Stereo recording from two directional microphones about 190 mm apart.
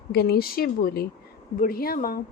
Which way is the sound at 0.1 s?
55° left (ahead or behind).